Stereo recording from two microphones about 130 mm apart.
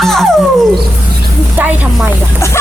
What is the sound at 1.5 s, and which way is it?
Speech, 10° right (ahead or behind).